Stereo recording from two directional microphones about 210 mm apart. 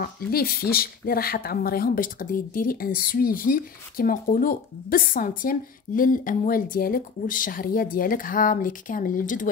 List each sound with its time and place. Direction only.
0.0 s speech: 45° left (ahead or behind)